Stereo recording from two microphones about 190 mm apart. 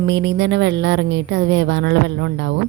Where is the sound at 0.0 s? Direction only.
70° right (ahead or behind).